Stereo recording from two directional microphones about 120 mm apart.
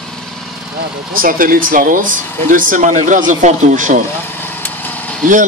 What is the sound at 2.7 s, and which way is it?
Speech, 90° right.